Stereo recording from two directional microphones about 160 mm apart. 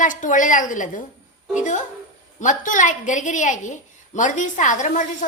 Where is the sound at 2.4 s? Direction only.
55° left (ahead or behind).